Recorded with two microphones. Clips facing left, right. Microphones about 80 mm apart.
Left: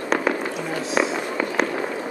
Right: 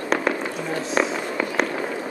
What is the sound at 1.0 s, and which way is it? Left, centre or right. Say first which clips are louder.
Fireworks: left 1 dB; centre.